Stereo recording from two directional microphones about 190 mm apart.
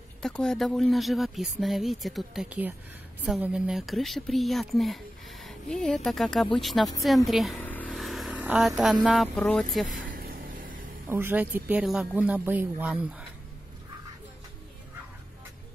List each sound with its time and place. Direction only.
0.2 s speech: 5° left (ahead or behind)
7.2 s a sound: centre (ahead or behind)
9.0 s speech: centre (ahead or behind)
10.1 s vehicle: 50° right (ahead or behind)
11.1 s speech: 10° right (ahead or behind)